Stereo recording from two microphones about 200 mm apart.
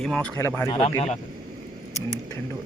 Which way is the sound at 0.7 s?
25° left (ahead or behind).